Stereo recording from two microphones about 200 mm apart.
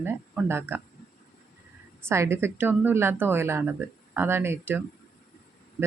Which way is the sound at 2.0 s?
15° right (ahead or behind).